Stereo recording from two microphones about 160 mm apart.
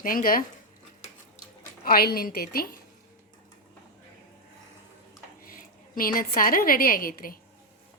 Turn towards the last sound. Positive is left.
turn(degrees=65)  # may be behind; listen again after turning